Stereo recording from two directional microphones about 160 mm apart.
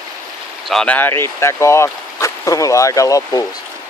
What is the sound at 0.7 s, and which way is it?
Speech, 5° left (ahead or behind).